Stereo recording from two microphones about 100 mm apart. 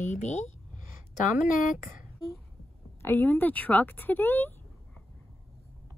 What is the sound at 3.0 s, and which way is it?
A woman's voice, 25° left (ahead or behind).